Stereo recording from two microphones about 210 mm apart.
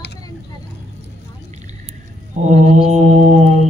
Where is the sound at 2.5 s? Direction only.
30° right (ahead or behind).